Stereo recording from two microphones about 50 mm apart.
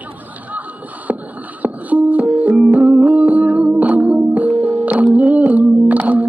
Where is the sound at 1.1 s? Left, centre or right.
Right.